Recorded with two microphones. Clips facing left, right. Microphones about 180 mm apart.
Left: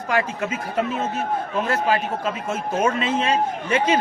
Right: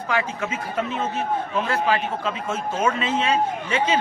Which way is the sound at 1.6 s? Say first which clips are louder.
Left 2 dB; 45° left (ahead or behind).